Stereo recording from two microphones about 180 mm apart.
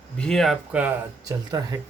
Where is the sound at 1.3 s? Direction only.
20° right (ahead or behind).